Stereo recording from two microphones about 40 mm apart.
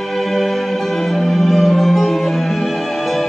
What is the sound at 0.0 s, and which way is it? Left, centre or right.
Music, centre.